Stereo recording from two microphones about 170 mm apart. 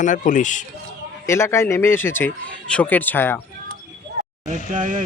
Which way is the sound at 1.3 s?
15° left (ahead or behind).